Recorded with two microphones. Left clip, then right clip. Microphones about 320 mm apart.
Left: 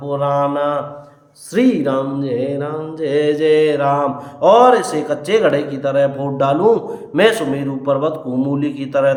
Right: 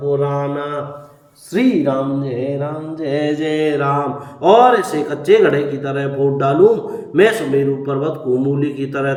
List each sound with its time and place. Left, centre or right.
0.1 s mantra: left
1.5 s mantra: centre
8.5 s a man's voice: centre